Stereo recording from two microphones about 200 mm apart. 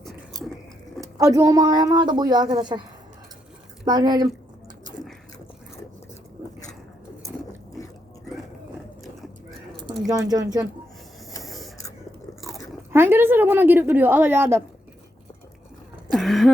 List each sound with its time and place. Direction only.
1.0 s speech: 15° right (ahead or behind)
3.8 s speech: 20° right (ahead or behind)
10.1 s speech: 20° right (ahead or behind)
11.4 s printer: centre (ahead or behind)
12.4 s crunch: centre (ahead or behind)
12.9 s a woman's voice: 10° right (ahead or behind)
16.1 s a sound: centre (ahead or behind)